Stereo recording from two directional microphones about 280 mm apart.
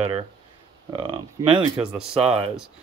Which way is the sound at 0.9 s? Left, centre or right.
Centre.